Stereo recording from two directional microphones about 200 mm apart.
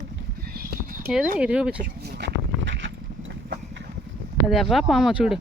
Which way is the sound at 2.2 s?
65° right (ahead or behind).